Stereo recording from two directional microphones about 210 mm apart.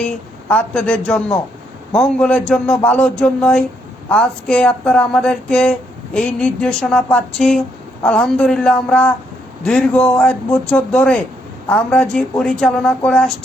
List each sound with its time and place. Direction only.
0.0 s speech: 5° left (ahead or behind)